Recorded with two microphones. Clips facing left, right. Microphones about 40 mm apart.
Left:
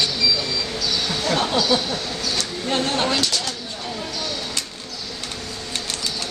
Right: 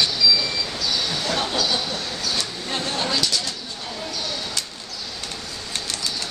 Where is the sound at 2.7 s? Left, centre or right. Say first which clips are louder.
Left 4 dB; left.